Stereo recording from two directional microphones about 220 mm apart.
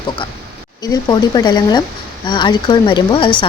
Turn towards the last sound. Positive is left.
turn(degrees=20)  # may be behind; listen again after turning